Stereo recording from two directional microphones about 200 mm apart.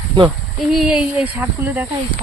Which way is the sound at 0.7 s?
5° right (ahead or behind).